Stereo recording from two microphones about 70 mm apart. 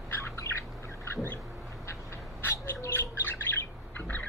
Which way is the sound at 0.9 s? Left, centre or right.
Left.